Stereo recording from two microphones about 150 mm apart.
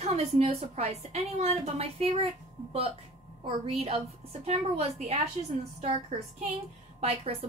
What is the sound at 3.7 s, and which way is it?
A woman's voice, 45° right (ahead or behind).